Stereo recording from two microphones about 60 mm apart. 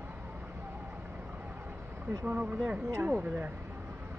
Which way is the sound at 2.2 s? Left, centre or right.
Right.